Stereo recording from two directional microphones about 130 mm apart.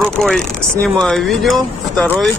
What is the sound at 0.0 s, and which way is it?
Speech, 5° left (ahead or behind).